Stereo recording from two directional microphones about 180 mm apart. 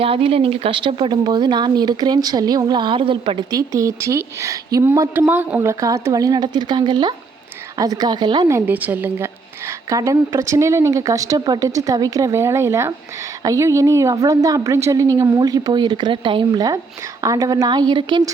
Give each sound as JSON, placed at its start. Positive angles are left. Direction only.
{"t": 0.0, "sound": "a woman's voice", "side_deg": -30}